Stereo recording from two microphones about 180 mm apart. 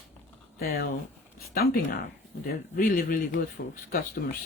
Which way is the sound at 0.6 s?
60° left (ahead or behind).